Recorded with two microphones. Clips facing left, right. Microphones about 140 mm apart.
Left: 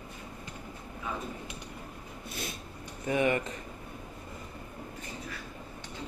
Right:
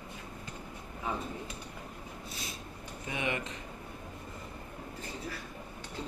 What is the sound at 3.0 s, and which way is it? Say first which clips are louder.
Speech: left 8 dB; 45° left (ahead or behind).